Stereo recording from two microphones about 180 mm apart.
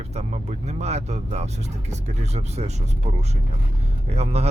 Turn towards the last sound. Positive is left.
turn(degrees=-35)  # may be behind; listen again after turning